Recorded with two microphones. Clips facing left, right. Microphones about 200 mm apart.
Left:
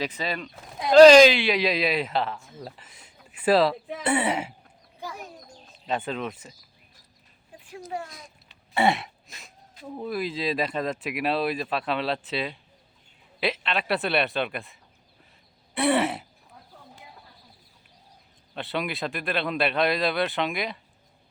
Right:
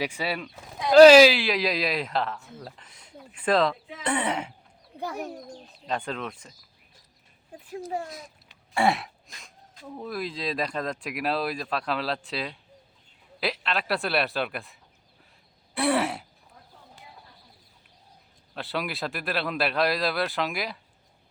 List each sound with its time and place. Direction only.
0.0 s speech: 10° right (ahead or behind); by 4.5 s 5° left (ahead or behind)
4.9 s speech: 60° right (ahead or behind)
5.8 s speech: 5° left (ahead or behind)
8.7 s throat clearing: centre (ahead or behind)
9.4 s speech: 5° left (ahead or behind)
18.5 s speech: centre (ahead or behind)